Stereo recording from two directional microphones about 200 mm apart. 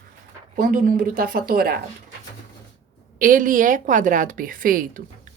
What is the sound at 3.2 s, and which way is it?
A woman's voice, 45° right (ahead or behind).